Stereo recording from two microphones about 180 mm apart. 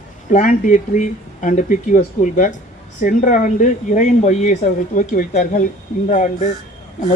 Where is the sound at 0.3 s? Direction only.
45° left (ahead or behind).